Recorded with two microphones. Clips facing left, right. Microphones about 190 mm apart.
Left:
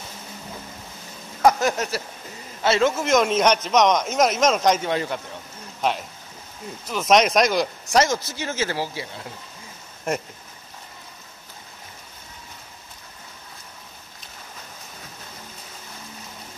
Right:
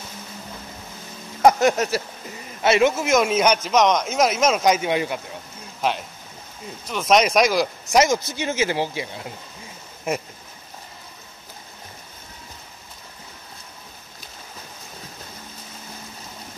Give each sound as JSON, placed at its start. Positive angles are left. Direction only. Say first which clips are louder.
{"t": 1.4, "sound": "a sound", "louder": "right 3 dB", "side_deg": -20}
{"t": 2.6, "sound": "speech", "louder": "right 2 dB", "side_deg": -15}
{"t": 3.0, "sound": "speech", "louder": "even", "side_deg": -5}
{"t": 5.8, "sound": "speech", "louder": "even", "side_deg": 0}
{"t": 10.1, "sound": "speech", "louder": "even", "side_deg": 0}